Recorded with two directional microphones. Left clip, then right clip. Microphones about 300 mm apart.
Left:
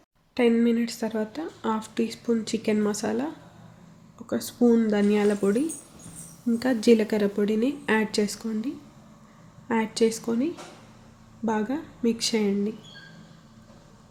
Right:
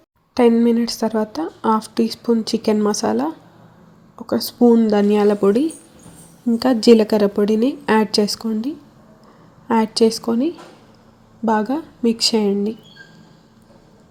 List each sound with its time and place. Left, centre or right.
0.3 s a woman's voice: right